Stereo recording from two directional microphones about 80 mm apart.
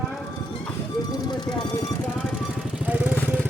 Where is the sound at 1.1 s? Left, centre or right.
Left.